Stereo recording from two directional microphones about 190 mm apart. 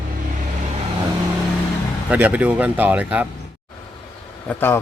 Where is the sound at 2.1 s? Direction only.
5° right (ahead or behind).